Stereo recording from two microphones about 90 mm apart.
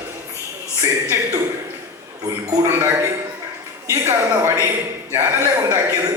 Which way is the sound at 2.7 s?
30° right (ahead or behind).